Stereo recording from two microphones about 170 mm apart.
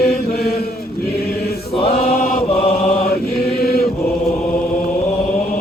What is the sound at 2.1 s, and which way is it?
Chant, 60° left (ahead or behind).